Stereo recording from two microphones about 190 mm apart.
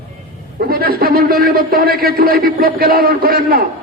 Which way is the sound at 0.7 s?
50° right (ahead or behind).